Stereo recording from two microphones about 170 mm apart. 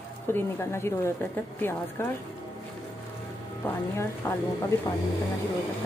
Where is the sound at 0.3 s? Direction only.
15° left (ahead or behind).